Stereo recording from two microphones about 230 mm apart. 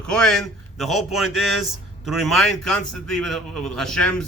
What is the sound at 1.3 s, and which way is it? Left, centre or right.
Speech, left.